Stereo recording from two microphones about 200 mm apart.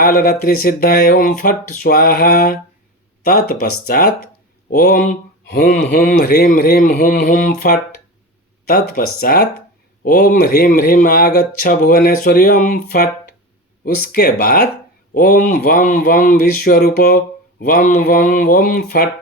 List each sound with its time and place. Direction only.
0.0 s speech: 45° left (ahead or behind)